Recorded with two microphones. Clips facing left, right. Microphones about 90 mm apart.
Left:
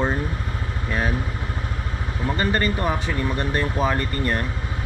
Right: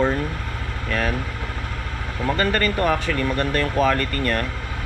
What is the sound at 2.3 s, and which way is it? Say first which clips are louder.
Speech: right 2 dB; 75° right (ahead or behind).